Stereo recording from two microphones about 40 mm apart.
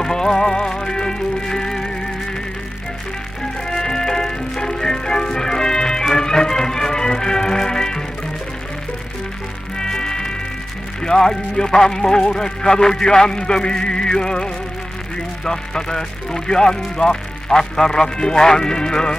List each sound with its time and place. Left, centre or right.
0.0 s music: centre
3.6 s music: centre
9.8 s music: centre
11.0 s speech: centre